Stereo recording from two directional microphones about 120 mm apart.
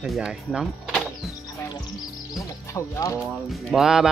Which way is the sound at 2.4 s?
25° left (ahead or behind).